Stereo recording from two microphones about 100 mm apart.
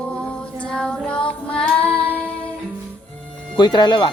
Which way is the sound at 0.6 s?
10° left (ahead or behind).